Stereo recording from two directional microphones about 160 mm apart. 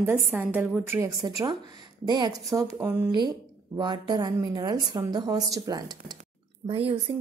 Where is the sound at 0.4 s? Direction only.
10° right (ahead or behind).